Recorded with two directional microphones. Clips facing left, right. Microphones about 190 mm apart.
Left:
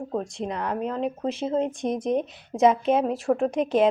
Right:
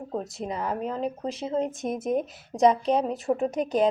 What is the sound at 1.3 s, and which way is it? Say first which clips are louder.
Speech: left 3 dB; 25° left (ahead or behind).